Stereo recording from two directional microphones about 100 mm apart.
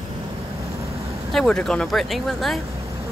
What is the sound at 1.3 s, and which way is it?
Speech, 10° left (ahead or behind).